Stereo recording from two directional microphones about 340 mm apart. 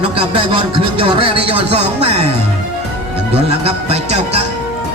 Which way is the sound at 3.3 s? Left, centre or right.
Centre.